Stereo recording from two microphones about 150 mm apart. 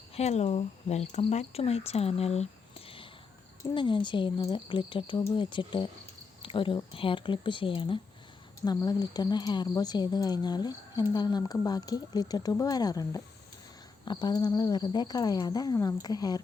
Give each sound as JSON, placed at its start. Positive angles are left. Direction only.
{"t": 0.1, "sound": "a woman's voice", "side_deg": 45}
{"t": 6.4, "sound": "a sound", "side_deg": 35}
{"t": 6.9, "sound": "a woman's voice", "side_deg": 35}